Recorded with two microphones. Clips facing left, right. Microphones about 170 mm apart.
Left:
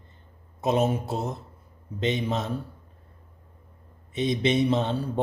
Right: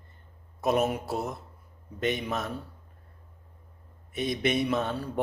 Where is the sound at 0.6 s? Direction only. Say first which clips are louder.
Left 2 dB; 25° left (ahead or behind).